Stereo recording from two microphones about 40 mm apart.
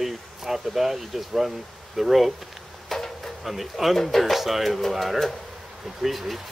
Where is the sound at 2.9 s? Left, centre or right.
Centre.